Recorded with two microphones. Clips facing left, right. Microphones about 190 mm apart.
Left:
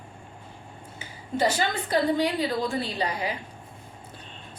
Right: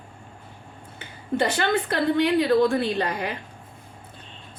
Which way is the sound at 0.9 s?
60° right (ahead or behind).